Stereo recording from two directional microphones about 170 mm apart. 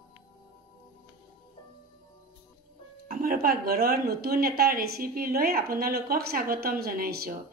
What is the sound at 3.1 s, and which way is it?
A woman's voice, 55° right (ahead or behind).